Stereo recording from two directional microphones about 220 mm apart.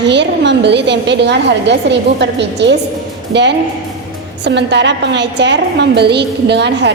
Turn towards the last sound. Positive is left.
turn(degrees=-50)  # may be behind; listen again after turning